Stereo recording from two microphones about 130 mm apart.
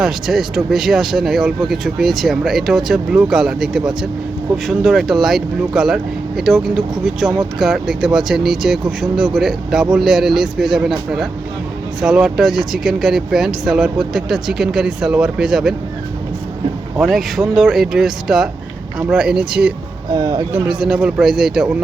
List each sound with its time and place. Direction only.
0.0 s speech: centre (ahead or behind)
11.9 s speech: 5° right (ahead or behind)
17.0 s speech: centre (ahead or behind)
20.1 s speech: 30° right (ahead or behind)
20.5 s speech: 5° right (ahead or behind)